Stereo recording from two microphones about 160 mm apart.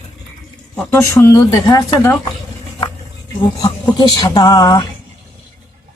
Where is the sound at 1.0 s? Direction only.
20° left (ahead or behind).